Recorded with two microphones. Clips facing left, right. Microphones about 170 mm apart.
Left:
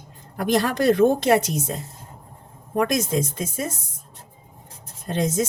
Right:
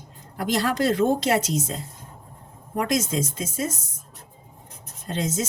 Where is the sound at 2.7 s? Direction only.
55° left (ahead or behind).